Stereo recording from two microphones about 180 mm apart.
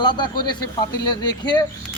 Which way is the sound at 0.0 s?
25° left (ahead or behind).